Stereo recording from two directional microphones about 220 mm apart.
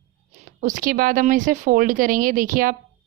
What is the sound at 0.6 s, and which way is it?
A woman's voice, 35° right (ahead or behind).